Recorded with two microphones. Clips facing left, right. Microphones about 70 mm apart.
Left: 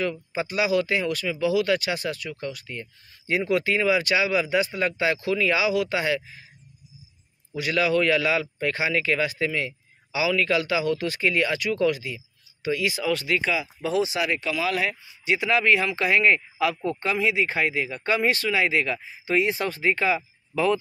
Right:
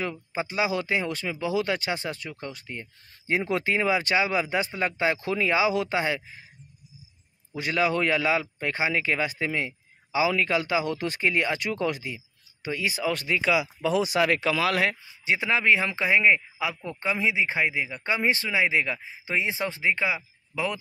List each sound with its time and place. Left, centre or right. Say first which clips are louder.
0.0 s speech: left 3 dB; right
7.5 s speech: left 2 dB; right
13.4 s speech: right 2 dB; centre
14.0 s speech: right 3 dB; right
14.3 s speech: right 1 dB; right
15.2 s speech: left 2 dB; right; by 20.8 s centre